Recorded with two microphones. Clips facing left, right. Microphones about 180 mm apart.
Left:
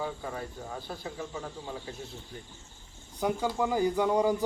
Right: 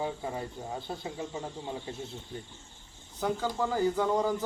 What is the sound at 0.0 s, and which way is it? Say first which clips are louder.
Speech: right 1 dB; 20° right (ahead or behind).